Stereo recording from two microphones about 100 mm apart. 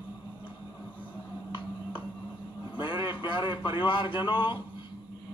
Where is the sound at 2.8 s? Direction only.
50° left (ahead or behind).